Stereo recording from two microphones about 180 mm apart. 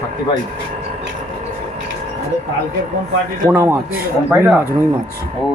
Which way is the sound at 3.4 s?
15° right (ahead or behind).